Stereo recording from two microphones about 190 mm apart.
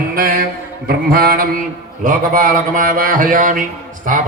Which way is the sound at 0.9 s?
50° right (ahead or behind).